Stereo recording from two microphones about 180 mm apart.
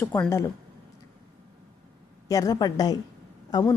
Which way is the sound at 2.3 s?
20° left (ahead or behind).